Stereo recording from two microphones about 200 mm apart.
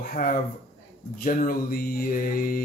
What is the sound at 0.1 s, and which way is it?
A man's voice, 45° left (ahead or behind).